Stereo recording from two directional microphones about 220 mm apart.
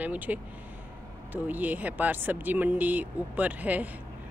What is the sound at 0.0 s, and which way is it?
Speech, 5° right (ahead or behind).